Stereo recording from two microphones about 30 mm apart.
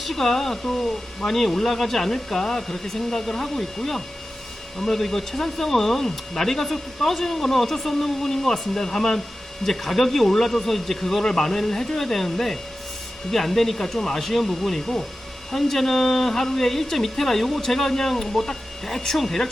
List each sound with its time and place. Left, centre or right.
0.0 s speech: centre